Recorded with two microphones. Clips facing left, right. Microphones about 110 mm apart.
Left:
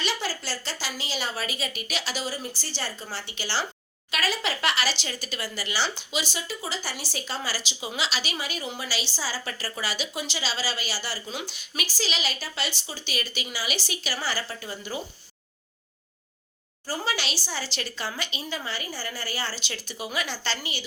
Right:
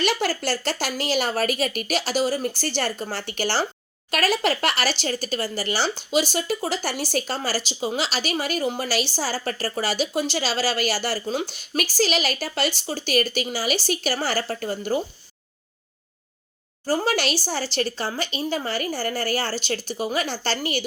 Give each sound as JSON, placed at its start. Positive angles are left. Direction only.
{"t": 0.0, "sound": "speech", "side_deg": -50}
{"t": 16.8, "sound": "speech", "side_deg": -45}